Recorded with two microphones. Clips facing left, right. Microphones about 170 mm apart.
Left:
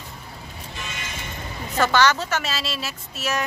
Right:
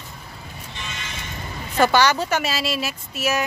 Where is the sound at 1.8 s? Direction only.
15° right (ahead or behind).